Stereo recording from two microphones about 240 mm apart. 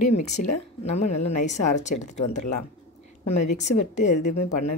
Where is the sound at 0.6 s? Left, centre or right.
Left.